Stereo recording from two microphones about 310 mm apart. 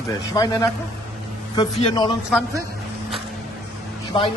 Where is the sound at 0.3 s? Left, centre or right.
Centre.